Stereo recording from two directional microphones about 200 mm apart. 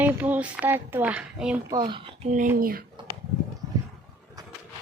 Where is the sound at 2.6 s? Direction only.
45° right (ahead or behind).